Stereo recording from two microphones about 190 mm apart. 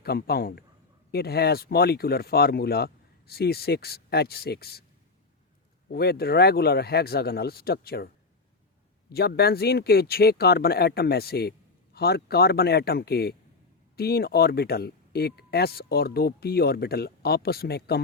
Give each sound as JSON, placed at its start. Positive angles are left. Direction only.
{"t": 0.0, "sound": "speech", "side_deg": 55}
{"t": 5.9, "sound": "speech", "side_deg": 55}